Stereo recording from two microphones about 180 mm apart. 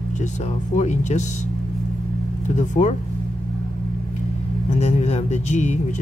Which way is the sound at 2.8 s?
45° left (ahead or behind).